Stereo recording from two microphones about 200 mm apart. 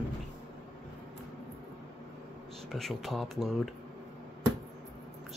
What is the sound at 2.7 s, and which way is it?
Speech, centre (ahead or behind).